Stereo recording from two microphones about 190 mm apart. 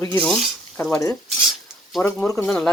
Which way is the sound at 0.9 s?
15° left (ahead or behind).